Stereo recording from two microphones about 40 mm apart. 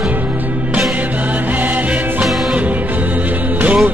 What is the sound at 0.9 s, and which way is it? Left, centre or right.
Music, right.